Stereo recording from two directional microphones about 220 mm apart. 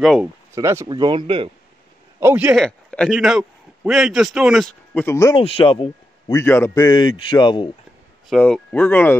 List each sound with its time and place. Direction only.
0.0 s speech: centre (ahead or behind)
0.6 s speech: 15° right (ahead or behind)
2.1 s a man's voice: 10° right (ahead or behind); by 5.4 s 15° left (ahead or behind)
5.4 s a man's voice: 25° left (ahead or behind)
8.3 s speech: 5° left (ahead or behind)